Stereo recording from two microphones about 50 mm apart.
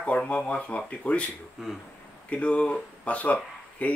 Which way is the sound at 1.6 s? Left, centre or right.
Centre.